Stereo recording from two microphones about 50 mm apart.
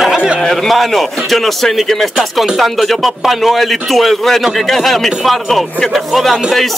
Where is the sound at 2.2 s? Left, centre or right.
Centre.